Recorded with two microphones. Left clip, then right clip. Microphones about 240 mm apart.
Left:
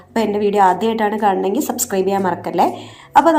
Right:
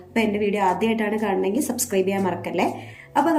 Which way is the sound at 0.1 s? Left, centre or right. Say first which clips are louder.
Left 5 dB; left.